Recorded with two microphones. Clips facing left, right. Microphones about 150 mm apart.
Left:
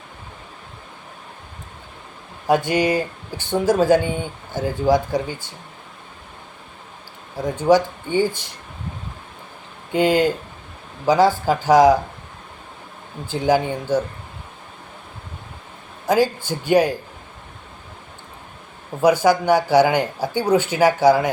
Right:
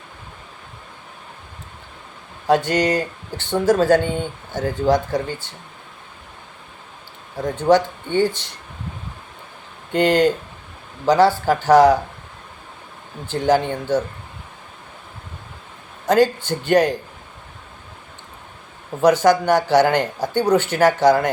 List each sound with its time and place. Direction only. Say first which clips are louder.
2.5 s speech: even; 10° left (ahead or behind)
7.3 s speech: even; 10° left (ahead or behind)
9.9 s speech: right 1 dB; 10° left (ahead or behind)
13.2 s speech: right 1 dB; 10° left (ahead or behind)
16.0 s speech: right 2 dB; 10° left (ahead or behind)
19.0 s speech: right 1 dB; 10° left (ahead or behind)